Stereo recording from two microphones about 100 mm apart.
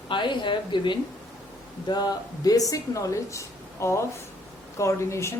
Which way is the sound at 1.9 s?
40° left (ahead or behind).